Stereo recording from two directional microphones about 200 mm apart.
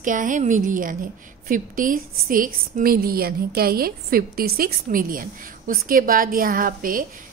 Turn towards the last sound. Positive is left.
turn(degrees=-45)  # may be behind; listen again after turning